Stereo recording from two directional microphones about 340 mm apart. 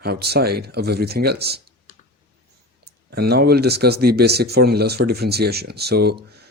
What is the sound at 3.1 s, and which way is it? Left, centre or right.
Speech, right.